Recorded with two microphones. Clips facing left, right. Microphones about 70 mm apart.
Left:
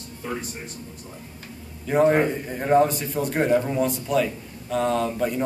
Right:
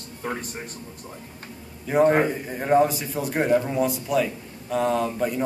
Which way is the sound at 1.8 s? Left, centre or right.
Centre.